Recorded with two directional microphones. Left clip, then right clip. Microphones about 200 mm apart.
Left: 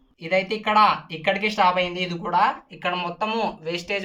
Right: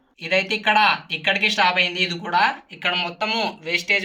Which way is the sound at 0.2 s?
Centre (ahead or behind).